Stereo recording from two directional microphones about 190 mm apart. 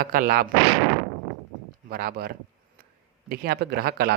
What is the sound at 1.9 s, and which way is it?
A man's voice, 55° right (ahead or behind).